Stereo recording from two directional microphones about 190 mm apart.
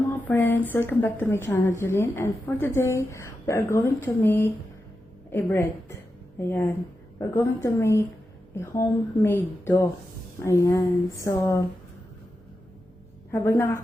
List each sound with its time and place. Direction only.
0.1 s a woman's voice: 10° left (ahead or behind)
13.3 s a woman's voice: 10° left (ahead or behind)